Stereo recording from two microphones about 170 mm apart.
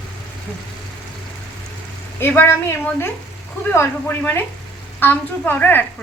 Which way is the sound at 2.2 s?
10° left (ahead or behind).